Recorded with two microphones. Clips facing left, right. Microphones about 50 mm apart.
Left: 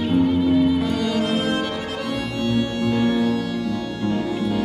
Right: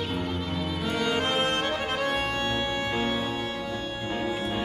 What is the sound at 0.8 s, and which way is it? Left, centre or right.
Music, centre.